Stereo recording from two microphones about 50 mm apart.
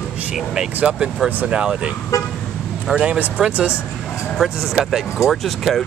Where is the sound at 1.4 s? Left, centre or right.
Right.